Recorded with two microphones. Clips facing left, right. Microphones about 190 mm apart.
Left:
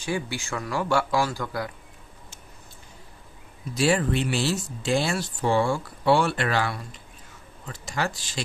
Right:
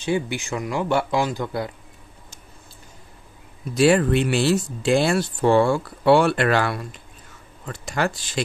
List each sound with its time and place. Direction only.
0.0 s speech: 20° right (ahead or behind)
3.7 s speech: 60° right (ahead or behind)